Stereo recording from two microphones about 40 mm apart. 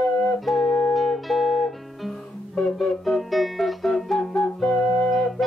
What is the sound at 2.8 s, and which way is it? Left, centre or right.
Music, centre.